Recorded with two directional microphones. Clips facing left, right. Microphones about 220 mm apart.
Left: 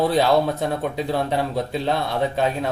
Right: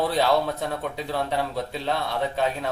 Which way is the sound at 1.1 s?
15° left (ahead or behind).